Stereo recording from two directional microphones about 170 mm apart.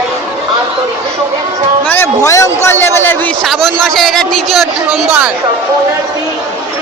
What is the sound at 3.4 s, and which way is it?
Speech, centre (ahead or behind).